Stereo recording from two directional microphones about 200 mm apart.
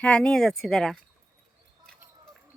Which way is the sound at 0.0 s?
5° left (ahead or behind).